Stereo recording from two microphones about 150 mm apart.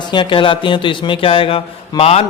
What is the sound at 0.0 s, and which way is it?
A man's voice, 30° left (ahead or behind).